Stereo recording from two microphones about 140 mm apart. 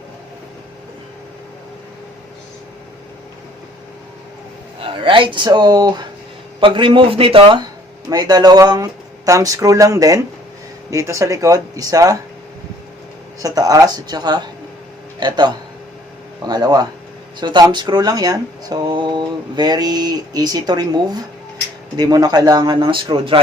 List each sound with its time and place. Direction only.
4.8 s speech: 35° right (ahead or behind)
8.1 s speech: 30° right (ahead or behind)
13.4 s speech: 25° right (ahead or behind)